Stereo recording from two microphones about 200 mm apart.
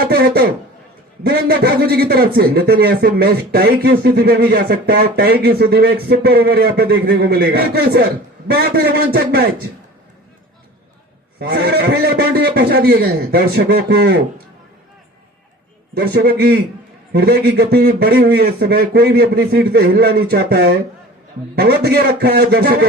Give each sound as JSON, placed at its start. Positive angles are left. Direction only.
{"t": 0.0, "sound": "a man's voice", "side_deg": -50}
{"t": 11.3, "sound": "a man's voice", "side_deg": -55}
{"t": 16.1, "sound": "a man's voice", "side_deg": -50}